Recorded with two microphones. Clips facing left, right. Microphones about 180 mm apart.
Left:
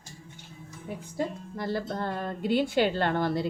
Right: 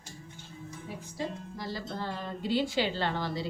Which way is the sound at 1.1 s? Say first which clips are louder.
Left 5 dB; 60° left (ahead or behind).